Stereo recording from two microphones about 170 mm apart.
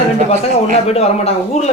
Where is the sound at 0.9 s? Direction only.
40° left (ahead or behind).